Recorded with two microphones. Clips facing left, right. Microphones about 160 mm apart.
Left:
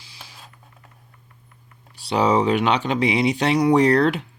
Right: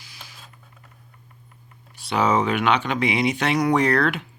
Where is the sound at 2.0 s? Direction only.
35° left (ahead or behind).